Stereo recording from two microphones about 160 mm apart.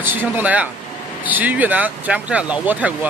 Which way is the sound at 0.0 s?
10° right (ahead or behind).